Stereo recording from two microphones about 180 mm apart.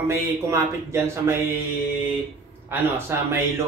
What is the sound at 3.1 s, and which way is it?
Speech, 15° right (ahead or behind).